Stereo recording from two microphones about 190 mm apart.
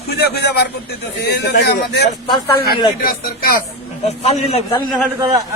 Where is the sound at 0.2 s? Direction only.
60° left (ahead or behind).